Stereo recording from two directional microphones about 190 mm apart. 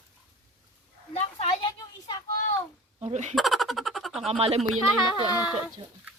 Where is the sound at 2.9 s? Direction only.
35° right (ahead or behind).